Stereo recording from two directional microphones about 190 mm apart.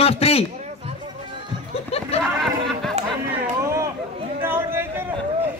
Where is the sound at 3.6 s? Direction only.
15° right (ahead or behind).